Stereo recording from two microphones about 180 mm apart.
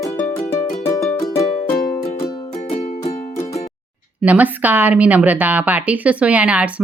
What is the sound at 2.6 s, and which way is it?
Music, 40° left (ahead or behind).